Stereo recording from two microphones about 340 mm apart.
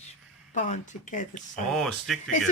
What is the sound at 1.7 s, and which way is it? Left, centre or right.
Speech, centre.